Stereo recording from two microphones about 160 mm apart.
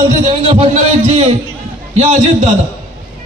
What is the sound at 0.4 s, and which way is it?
A man's voice, 40° right (ahead or behind).